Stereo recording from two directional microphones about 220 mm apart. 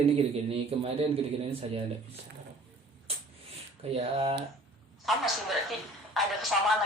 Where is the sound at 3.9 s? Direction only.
25° right (ahead or behind).